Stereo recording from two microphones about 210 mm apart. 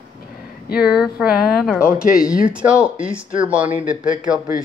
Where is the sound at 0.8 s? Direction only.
5° right (ahead or behind).